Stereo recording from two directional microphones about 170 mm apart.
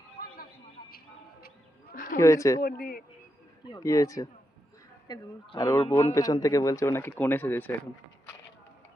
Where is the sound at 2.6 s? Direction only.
60° left (ahead or behind).